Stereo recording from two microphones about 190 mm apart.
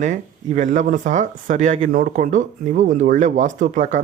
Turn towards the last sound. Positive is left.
turn(degrees=-40)  # may be behind; listen again after turning